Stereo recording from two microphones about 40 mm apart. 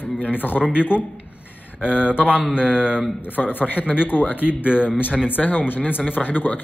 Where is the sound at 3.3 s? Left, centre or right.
Left.